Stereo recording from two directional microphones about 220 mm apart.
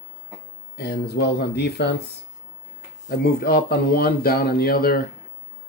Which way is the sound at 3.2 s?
45° left (ahead or behind).